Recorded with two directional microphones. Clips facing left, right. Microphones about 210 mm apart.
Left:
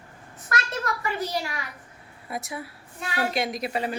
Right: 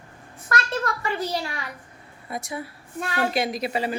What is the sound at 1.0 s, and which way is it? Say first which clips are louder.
Speech: right 2 dB; 30° right (ahead or behind).